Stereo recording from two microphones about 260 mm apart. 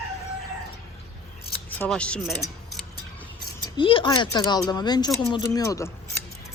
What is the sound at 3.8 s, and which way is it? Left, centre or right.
Speech, centre.